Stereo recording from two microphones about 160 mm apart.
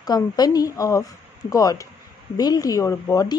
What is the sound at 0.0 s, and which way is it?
Speech, 25° left (ahead or behind).